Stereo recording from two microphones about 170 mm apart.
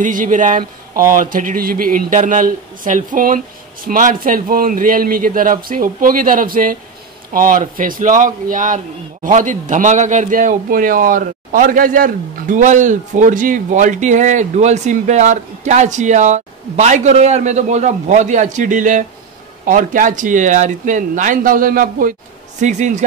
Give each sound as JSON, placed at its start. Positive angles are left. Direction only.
{"t": 0.0, "sound": "a man's voice", "side_deg": -50}
{"t": 22.6, "sound": "a man's voice", "side_deg": -45}